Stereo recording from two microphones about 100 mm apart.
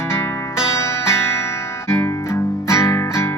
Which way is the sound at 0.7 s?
30° left (ahead or behind).